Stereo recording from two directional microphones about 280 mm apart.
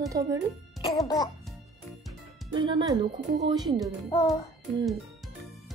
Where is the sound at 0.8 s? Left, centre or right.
Centre.